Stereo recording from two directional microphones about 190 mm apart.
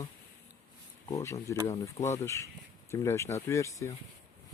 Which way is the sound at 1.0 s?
15° left (ahead or behind).